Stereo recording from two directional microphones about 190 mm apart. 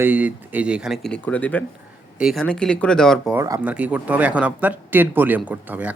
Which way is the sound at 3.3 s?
15° right (ahead or behind).